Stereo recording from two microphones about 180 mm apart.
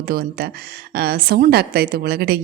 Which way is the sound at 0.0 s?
55° right (ahead or behind).